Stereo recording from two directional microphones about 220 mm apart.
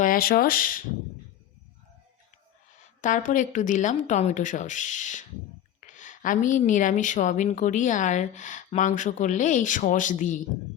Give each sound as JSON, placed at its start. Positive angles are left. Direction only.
{"t": 0.0, "sound": "speech", "side_deg": 40}
{"t": 3.0, "sound": "a woman's voice", "side_deg": 35}